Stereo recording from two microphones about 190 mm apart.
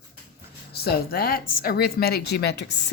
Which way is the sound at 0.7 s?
55° left (ahead or behind).